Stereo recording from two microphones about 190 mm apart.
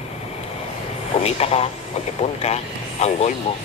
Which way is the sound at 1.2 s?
35° left (ahead or behind).